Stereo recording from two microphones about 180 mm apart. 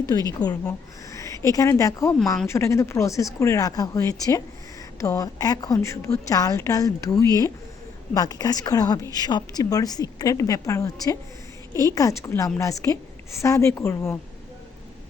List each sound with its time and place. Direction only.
0.1 s a woman's voice: 20° left (ahead or behind)
2.1 s speech: 5° left (ahead or behind)
2.5 s a woman's voice: 15° left (ahead or behind)